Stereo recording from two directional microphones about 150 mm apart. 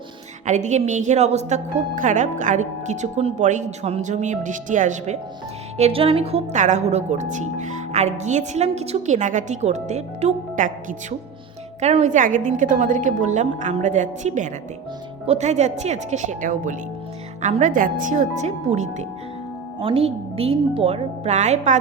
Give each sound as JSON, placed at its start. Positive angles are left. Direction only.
{"t": 0.4, "sound": "speech", "side_deg": -50}
{"t": 5.7, "sound": "a woman's voice", "side_deg": -40}
{"t": 19.8, "sound": "a woman's voice", "side_deg": -40}